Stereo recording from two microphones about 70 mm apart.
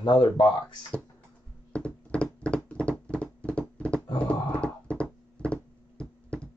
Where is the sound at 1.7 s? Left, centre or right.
Centre.